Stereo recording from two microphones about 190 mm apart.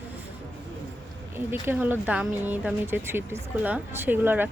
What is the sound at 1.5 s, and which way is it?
Speech, 10° right (ahead or behind).